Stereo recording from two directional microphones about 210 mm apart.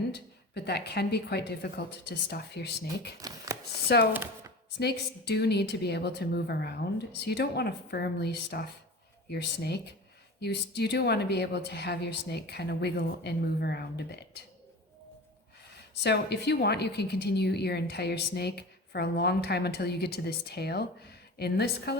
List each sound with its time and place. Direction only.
0.1 s a woman's voice: 50° left (ahead or behind)
3.2 s a sound: 15° right (ahead or behind)
4.1 s speech: 10° right (ahead or behind)
4.8 s a woman's voice: 55° left (ahead or behind)
16.0 s a woman's voice: 50° left (ahead or behind)